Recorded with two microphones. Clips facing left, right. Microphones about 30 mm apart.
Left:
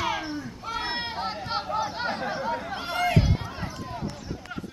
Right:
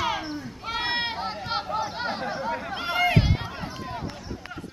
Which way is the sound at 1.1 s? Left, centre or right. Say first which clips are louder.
Even; centre.